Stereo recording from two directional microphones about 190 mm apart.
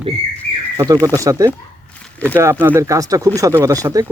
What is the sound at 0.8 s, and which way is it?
Speech, 20° right (ahead or behind).